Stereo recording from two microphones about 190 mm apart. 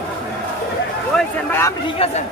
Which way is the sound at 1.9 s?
30° left (ahead or behind).